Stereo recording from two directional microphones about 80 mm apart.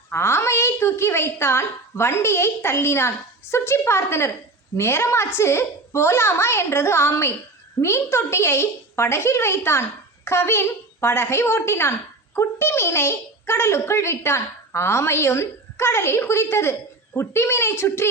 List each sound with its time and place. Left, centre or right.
0.1 s a woman's voice: left